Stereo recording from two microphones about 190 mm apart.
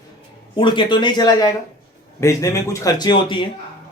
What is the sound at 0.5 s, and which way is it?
Speech, 25° left (ahead or behind).